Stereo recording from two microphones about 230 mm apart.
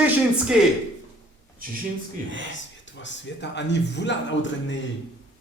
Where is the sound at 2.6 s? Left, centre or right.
Left.